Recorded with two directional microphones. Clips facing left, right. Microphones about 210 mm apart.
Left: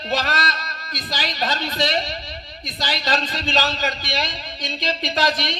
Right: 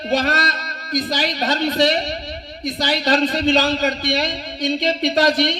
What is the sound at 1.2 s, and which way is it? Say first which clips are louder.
A man's voice: right 5 dB; 65° right (ahead or behind).